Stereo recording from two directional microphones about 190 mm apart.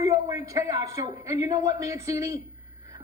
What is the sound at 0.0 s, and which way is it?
A man's voice, 15° right (ahead or behind).